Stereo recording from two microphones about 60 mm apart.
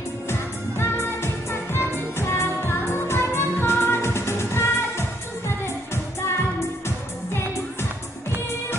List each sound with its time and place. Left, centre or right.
0.3 s music: left